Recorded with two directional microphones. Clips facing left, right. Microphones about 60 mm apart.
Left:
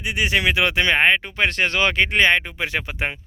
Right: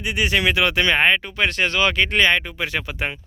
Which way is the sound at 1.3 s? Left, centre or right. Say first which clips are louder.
Even; left.